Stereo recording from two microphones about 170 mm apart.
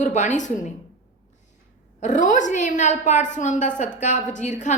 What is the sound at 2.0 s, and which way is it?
A woman's voice, 45° left (ahead or behind).